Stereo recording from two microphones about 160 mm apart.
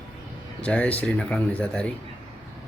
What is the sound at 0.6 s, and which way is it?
Speech, 10° left (ahead or behind).